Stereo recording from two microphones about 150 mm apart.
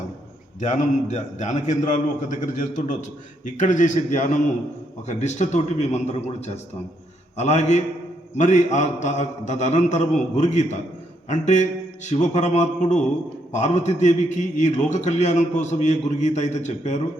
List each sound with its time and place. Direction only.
0.6 s a man's voice: 55° left (ahead or behind)